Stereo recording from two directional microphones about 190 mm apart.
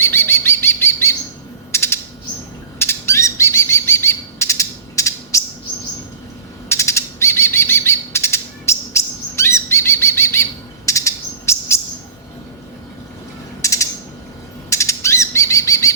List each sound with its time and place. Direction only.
0.0 s bird: 10° left (ahead or behind)
1.7 s chirp: 15° left (ahead or behind)
2.7 s bird: 15° left (ahead or behind)
6.7 s bird: 15° left (ahead or behind)
13.6 s mechanisms: 15° left (ahead or behind)
14.7 s bird: 15° left (ahead or behind)